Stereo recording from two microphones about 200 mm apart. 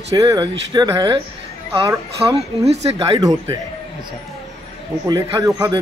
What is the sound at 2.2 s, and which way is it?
Speech, 30° right (ahead or behind).